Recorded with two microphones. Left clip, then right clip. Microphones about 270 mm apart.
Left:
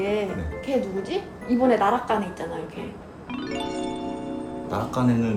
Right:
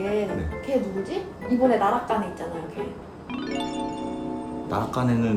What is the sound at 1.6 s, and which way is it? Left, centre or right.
Speech, left.